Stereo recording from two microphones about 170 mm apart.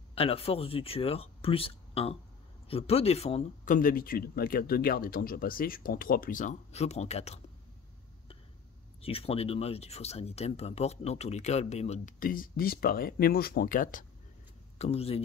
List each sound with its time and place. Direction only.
0.1 s speech: 35° left (ahead or behind)
9.0 s speech: 35° left (ahead or behind); by 14.0 s 55° left (ahead or behind)
14.8 s speech: 35° left (ahead or behind)